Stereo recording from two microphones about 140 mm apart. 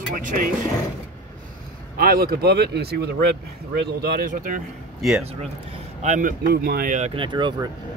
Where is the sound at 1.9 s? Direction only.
90° right.